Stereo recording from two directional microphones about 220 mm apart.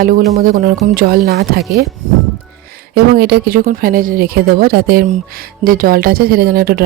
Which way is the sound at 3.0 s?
45° right (ahead or behind).